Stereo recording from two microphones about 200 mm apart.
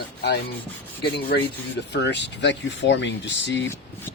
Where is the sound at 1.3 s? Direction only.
55° left (ahead or behind).